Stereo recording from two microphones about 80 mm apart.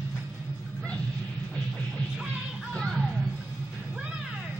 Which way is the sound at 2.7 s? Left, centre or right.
Centre.